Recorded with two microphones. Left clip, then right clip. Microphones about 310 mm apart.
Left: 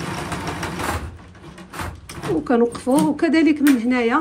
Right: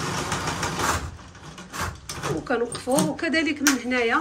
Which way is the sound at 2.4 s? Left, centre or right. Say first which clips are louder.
Left 9 dB; centre.